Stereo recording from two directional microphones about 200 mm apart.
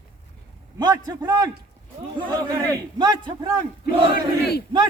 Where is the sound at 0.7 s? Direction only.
20° right (ahead or behind).